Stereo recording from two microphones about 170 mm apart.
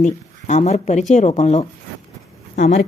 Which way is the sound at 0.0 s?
45° left (ahead or behind).